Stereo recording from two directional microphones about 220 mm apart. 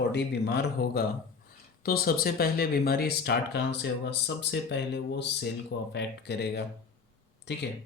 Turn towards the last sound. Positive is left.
turn(degrees=50)  # may be behind; listen again after turning